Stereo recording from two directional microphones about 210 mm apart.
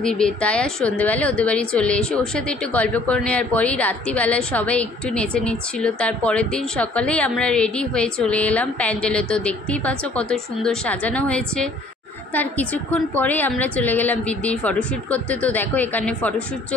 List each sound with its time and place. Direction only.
0.0 s a woman's voice: 5° left (ahead or behind)